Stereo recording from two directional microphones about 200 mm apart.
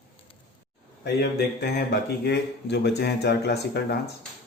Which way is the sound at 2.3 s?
60° left (ahead or behind).